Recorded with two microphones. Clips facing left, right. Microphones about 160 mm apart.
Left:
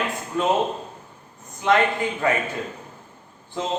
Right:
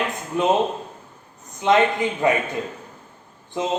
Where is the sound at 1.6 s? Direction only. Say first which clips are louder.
Right 2 dB; 20° right (ahead or behind).